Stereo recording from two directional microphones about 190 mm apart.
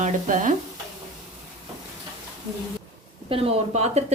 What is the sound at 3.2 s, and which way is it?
Speech, 30° right (ahead or behind).